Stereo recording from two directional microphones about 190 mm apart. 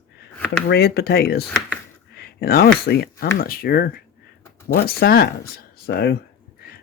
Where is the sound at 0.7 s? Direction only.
60° left (ahead or behind).